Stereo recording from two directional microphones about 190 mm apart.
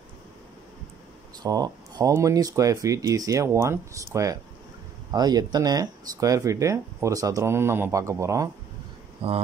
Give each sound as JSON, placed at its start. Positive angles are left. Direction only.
{"t": 1.4, "sound": "speech", "side_deg": -20}
{"t": 9.2, "sound": "speech", "side_deg": -30}